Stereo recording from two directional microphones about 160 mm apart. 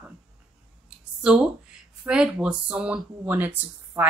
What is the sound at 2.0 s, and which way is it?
Speech, 5° right (ahead or behind).